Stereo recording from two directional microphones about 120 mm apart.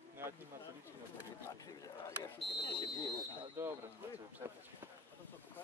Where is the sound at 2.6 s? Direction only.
35° left (ahead or behind).